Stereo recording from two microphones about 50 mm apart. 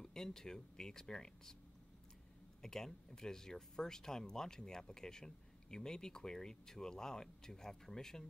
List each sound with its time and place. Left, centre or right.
0.0 s speech: centre
2.6 s speech: centre